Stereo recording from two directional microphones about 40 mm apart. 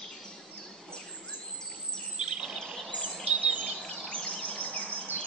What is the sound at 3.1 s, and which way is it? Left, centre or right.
Bird vocalization, centre.